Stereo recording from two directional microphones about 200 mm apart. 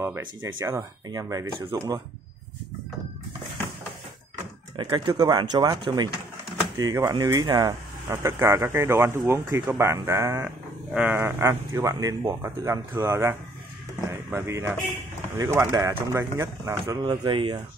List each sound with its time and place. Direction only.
0.2 s speech: 75° right (ahead or behind)
0.6 s speech: 15° right (ahead or behind)
4.7 s speech: 20° right (ahead or behind)